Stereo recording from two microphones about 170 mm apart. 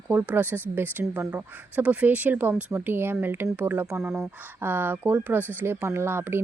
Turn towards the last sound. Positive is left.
turn(degrees=-15)  # may be behind; listen again after turning